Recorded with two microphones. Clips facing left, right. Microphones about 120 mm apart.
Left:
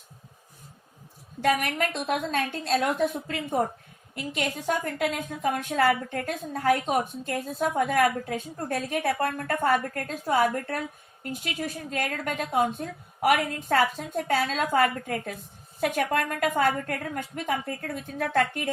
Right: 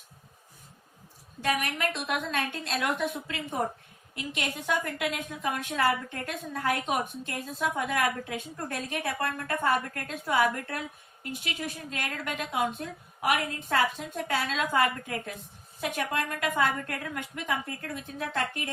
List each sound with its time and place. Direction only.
1.6 s a woman's voice: 40° left (ahead or behind); by 18.7 s 55° left (ahead or behind)